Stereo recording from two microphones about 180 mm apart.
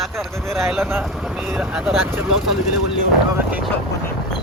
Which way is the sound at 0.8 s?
15° right (ahead or behind).